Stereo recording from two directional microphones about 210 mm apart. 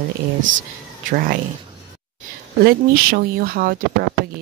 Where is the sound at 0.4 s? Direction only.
40° right (ahead or behind).